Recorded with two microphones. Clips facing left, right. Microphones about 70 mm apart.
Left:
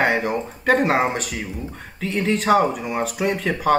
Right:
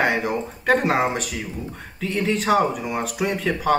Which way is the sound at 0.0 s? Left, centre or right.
Centre.